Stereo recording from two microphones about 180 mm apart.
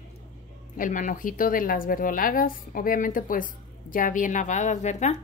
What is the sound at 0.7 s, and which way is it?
A woman's voice, 45° left (ahead or behind).